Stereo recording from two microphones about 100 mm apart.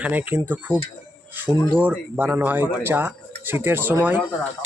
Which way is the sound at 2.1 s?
20° right (ahead or behind).